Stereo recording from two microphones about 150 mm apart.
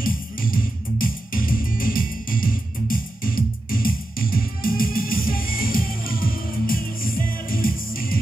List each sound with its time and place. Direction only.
0.0 s music: 65° left (ahead or behind)